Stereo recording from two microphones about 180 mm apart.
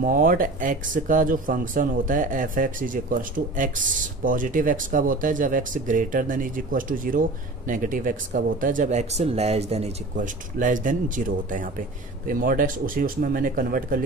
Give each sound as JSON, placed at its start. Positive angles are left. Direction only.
{"t": 0.0, "sound": "speech", "side_deg": -50}